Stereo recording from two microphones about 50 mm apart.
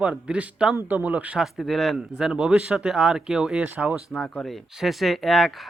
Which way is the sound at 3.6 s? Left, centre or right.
Right.